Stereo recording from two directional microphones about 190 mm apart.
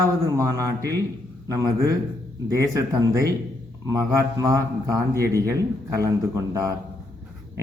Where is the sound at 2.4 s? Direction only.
15° right (ahead or behind).